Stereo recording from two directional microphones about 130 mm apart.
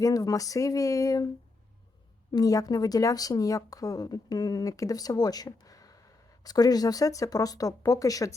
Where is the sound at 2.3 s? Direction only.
25° left (ahead or behind).